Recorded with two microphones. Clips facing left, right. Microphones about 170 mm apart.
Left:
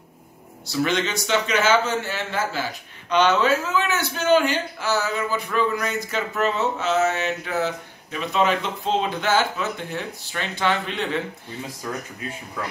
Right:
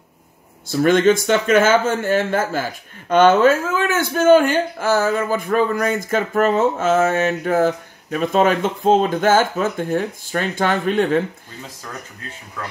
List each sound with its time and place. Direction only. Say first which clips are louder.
0.7 s a man's voice: right 9 dB; 50° right (ahead or behind)